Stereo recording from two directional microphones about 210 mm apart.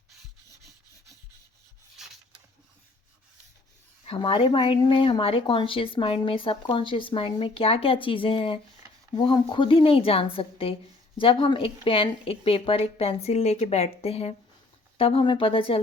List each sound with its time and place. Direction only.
4.0 s speech: 25° left (ahead or behind)